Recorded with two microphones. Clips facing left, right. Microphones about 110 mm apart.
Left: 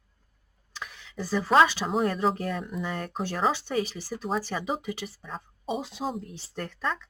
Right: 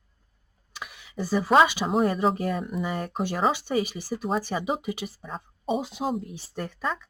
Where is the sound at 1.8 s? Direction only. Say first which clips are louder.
Right 2 dB; 5° right (ahead or behind).